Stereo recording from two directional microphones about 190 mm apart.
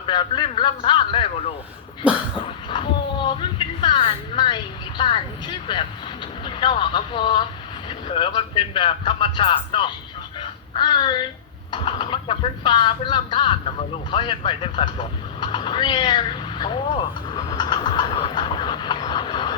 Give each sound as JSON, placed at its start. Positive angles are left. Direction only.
{"t": 0.0, "sound": "a man's voice", "side_deg": 25}
{"t": 2.0, "sound": "a sound", "side_deg": -5}
{"t": 2.6, "sound": "speech", "side_deg": 25}